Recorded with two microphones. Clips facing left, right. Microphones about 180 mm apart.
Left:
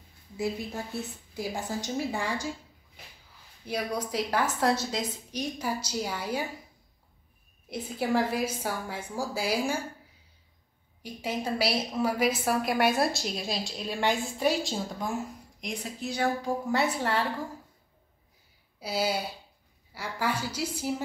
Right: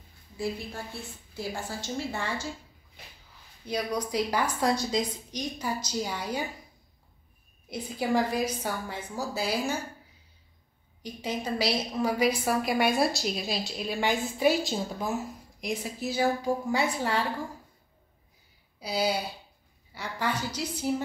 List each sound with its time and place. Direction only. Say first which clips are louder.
1.3 s a woman's voice: left 2 dB; 15° left (ahead or behind)
3.6 s a woman's voice: right 1 dB; 10° left (ahead or behind)
7.7 s a woman's voice: even; 5° left (ahead or behind)
11.0 s a woman's voice: even; 5° left (ahead or behind)
18.8 s a woman's voice: right 1 dB; 5° left (ahead or behind)